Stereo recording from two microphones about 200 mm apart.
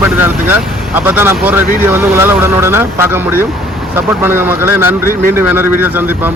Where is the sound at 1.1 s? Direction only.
10° right (ahead or behind).